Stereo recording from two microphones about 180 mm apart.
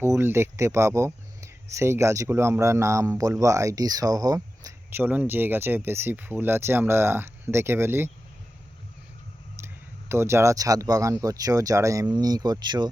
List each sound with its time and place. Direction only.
0.0 s speech: 15° right (ahead or behind)
9.6 s clicking: 15° right (ahead or behind)
10.1 s speech: 15° right (ahead or behind)